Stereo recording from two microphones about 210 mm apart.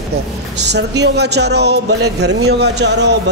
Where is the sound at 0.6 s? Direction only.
55° right (ahead or behind).